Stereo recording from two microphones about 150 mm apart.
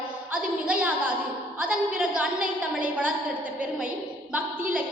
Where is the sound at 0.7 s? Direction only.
10° right (ahead or behind).